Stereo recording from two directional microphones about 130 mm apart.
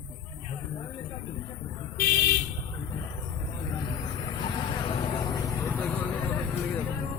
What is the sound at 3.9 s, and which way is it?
Vehicle, 30° left (ahead or behind).